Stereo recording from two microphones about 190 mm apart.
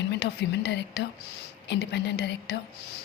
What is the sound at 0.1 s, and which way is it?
Speech, 60° left (ahead or behind).